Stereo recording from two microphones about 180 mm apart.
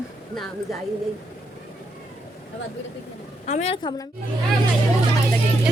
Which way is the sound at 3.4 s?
40° left (ahead or behind).